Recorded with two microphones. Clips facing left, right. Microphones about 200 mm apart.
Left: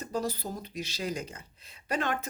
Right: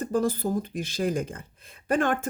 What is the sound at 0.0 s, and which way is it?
Speech, 50° right (ahead or behind).